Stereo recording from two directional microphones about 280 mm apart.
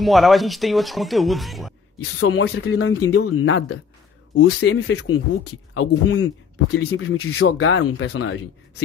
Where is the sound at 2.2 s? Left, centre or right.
Left.